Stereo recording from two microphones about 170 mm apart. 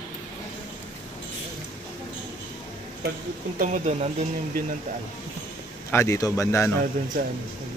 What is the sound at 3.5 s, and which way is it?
Speech, 50° right (ahead or behind).